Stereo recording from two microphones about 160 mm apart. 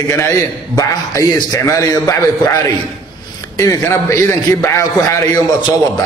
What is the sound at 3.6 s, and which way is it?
A man's voice, 20° left (ahead or behind).